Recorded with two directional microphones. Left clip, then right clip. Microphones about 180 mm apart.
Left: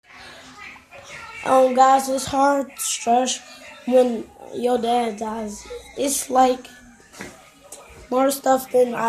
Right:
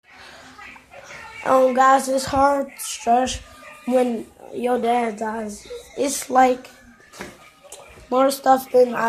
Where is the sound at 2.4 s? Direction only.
5° left (ahead or behind).